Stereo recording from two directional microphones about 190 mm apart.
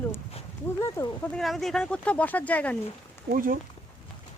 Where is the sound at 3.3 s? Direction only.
45° right (ahead or behind).